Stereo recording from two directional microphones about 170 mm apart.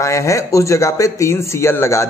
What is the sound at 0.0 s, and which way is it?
A man's voice, 20° left (ahead or behind).